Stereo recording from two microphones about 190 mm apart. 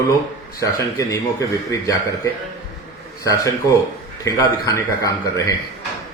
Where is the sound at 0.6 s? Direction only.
15° left (ahead or behind).